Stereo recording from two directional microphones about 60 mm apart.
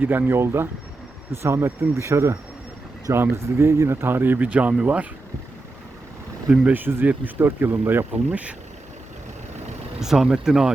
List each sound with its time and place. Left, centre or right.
0.0 s speech: right
6.7 s speech: right
8.3 s speech: right
10.0 s speech: centre